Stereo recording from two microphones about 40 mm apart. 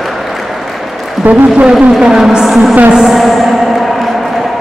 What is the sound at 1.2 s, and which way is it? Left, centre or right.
Speech, right.